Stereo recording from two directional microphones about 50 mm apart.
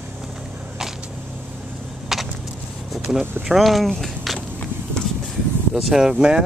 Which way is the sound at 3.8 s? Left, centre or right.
Centre.